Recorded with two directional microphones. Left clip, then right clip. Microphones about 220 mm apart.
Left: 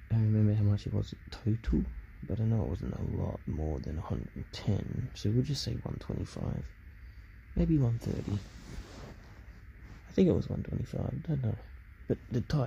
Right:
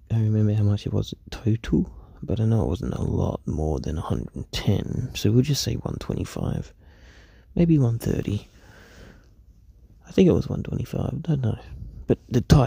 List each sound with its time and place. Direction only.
0.1 s a sound: 35° right (ahead or behind)
2.2 s speech: 40° right (ahead or behind)
10.0 s speech: 40° right (ahead or behind)